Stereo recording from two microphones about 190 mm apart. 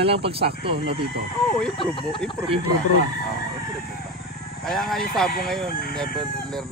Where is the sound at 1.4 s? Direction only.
Centre (ahead or behind).